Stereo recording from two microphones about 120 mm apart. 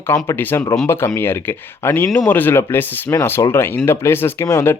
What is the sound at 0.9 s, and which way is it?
Speech, 20° left (ahead or behind).